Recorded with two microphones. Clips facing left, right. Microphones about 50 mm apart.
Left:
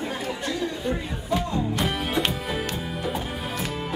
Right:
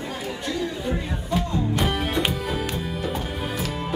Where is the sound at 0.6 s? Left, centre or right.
Centre.